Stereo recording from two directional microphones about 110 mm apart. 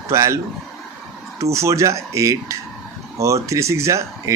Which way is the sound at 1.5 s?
25° right (ahead or behind).